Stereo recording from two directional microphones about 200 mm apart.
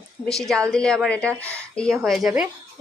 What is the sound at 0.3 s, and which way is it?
Speech, centre (ahead or behind).